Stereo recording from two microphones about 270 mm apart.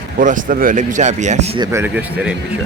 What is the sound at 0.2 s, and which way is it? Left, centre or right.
Speech, right.